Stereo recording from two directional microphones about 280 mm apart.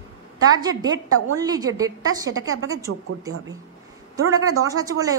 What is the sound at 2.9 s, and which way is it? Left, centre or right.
Speech, right.